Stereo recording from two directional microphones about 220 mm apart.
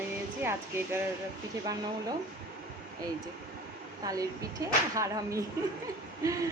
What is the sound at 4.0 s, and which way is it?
Speech, 15° right (ahead or behind).